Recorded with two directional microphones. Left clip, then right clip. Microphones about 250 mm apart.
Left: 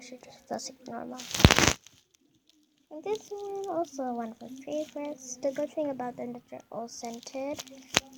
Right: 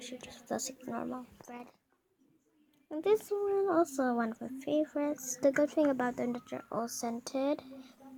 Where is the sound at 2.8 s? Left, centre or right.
Right.